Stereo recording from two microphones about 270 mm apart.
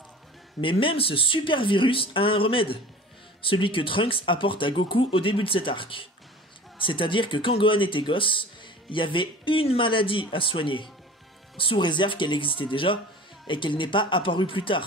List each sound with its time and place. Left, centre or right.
0.6 s speech: centre